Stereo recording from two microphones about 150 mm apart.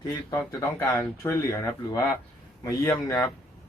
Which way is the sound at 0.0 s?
25° left (ahead or behind).